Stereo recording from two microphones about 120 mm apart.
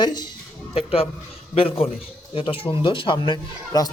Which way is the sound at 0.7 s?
55° left (ahead or behind).